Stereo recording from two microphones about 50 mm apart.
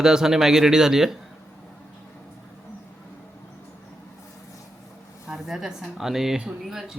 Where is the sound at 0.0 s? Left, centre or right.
Centre.